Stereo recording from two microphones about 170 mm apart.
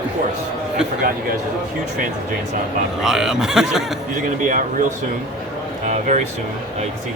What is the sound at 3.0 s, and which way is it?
Speech, 5° right (ahead or behind).